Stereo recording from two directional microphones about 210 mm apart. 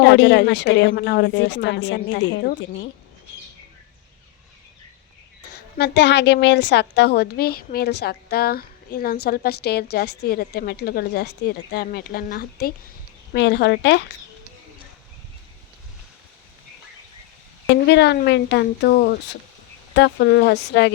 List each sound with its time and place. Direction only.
0.0 s a woman's voice: 60° left (ahead or behind)
5.5 s a woman's voice: 50° left (ahead or behind)
13.3 s a woman's voice: 55° left (ahead or behind)
17.8 s a woman's voice: 50° left (ahead or behind)